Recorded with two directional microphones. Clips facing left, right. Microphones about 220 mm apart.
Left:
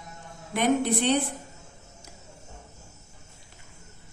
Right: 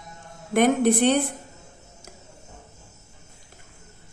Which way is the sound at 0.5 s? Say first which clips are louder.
Right 5 dB; 50° right (ahead or behind).